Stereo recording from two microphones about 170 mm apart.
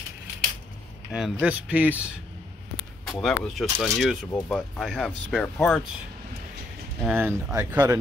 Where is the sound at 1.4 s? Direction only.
10° right (ahead or behind).